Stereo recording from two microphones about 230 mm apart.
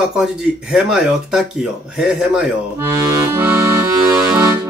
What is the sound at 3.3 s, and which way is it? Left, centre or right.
Accordion, centre.